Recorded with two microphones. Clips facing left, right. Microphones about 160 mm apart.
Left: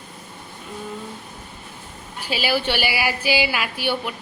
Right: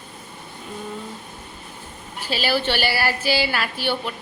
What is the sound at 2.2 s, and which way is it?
A woman's voice, 10° left (ahead or behind).